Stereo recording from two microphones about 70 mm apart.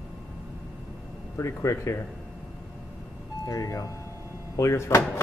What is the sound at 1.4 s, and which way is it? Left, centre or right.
Speech, left.